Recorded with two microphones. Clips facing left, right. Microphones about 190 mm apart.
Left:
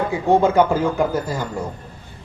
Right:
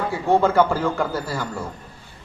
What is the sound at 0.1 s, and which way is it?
A man's voice, 15° left (ahead or behind).